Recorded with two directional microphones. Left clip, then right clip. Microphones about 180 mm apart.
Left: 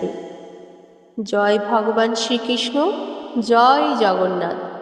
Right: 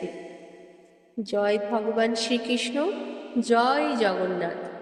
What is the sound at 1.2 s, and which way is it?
A man's voice, 25° left (ahead or behind).